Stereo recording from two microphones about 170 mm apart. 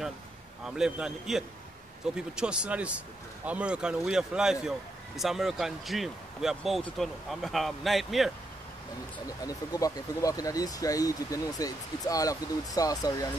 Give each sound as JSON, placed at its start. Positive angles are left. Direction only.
{"t": 0.7, "sound": "speech", "side_deg": -5}
{"t": 9.4, "sound": "speech", "side_deg": 20}